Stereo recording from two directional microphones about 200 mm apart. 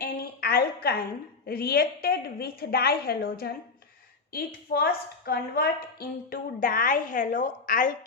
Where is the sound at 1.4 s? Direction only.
50° left (ahead or behind).